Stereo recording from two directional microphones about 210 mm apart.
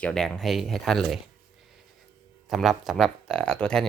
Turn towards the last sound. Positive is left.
turn(degrees=5)  # may be behind; listen again after turning